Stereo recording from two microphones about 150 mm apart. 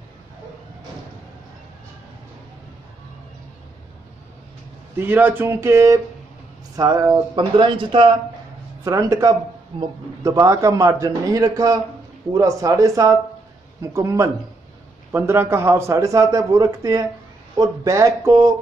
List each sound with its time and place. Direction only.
4.9 s speech: 15° right (ahead or behind); by 8.1 s 35° right (ahead or behind)
8.8 s a man's voice: 20° right (ahead or behind)